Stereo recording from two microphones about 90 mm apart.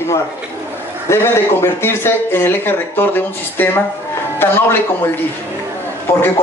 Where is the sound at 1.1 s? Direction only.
30° left (ahead or behind).